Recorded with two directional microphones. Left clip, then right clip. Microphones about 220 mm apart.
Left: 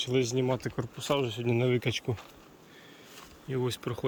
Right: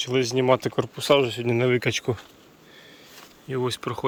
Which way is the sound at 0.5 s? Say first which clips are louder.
Right 12 dB; 30° right (ahead or behind).